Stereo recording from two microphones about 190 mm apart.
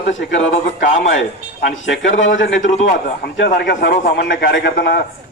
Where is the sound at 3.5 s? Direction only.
60° left (ahead or behind).